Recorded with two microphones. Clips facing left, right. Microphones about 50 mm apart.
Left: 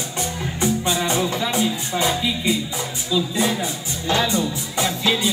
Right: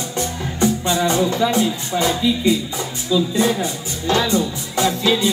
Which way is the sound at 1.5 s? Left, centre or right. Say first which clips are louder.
Right 3 dB; centre.